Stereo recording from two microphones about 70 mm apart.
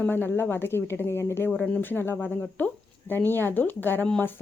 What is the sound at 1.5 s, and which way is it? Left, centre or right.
Speech, centre.